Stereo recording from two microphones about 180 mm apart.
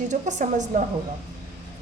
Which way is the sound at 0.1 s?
40° right (ahead or behind).